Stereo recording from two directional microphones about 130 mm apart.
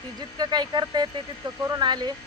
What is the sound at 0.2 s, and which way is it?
Speech, 30° right (ahead or behind).